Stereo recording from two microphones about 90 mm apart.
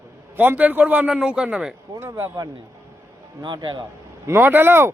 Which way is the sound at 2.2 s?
40° right (ahead or behind).